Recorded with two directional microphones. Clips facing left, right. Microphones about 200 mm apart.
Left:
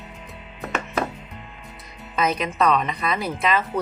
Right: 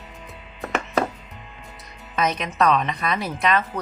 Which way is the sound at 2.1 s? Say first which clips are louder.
Even; centre (ahead or behind).